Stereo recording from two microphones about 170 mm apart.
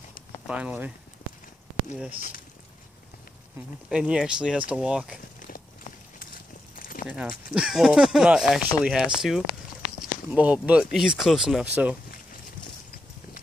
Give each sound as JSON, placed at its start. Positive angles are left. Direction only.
{"t": 0.5, "sound": "speech", "side_deg": -5}
{"t": 3.9, "sound": "speech", "side_deg": -5}
{"t": 5.4, "sound": "clip-clop", "side_deg": 55}
{"t": 6.7, "sound": "a sound", "side_deg": 55}
{"t": 7.1, "sound": "speech", "side_deg": -5}